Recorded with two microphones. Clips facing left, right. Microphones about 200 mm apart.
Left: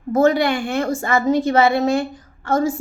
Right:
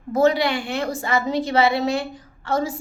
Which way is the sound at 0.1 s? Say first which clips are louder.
Left 3 dB; 50° left (ahead or behind).